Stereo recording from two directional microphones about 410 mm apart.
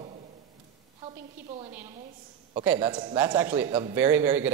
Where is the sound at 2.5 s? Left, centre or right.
Centre.